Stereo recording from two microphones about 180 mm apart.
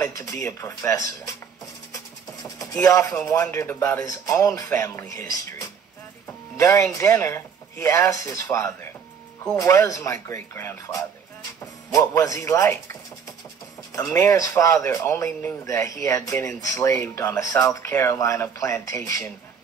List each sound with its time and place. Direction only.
0.0 s speech: 15° left (ahead or behind)
2.8 s speech: 15° left (ahead or behind)
13.9 s speech: 15° left (ahead or behind)